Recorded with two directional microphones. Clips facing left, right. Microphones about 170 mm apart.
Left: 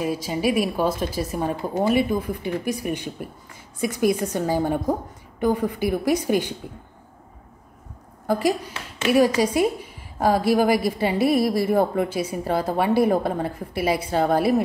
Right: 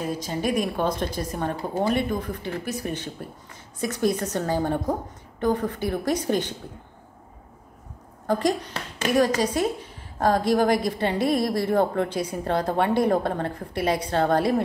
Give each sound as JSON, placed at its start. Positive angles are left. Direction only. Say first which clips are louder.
{"t": 0.0, "sound": "a woman's voice", "louder": "left 3 dB", "side_deg": 10}
{"t": 8.3, "sound": "a woman's voice", "louder": "left 1 dB", "side_deg": 10}
{"t": 8.7, "sound": "speech", "louder": "left 3 dB", "side_deg": -35}
{"t": 9.4, "sound": "a woman's voice", "louder": "left 3 dB", "side_deg": 10}